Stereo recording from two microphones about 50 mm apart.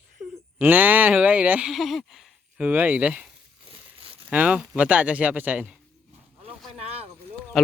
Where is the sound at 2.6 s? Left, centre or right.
Right.